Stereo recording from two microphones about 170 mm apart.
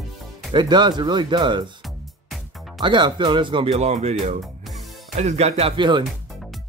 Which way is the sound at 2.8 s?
25° right (ahead or behind).